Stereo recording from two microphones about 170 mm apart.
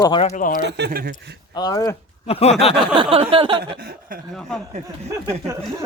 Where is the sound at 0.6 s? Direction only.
80° right.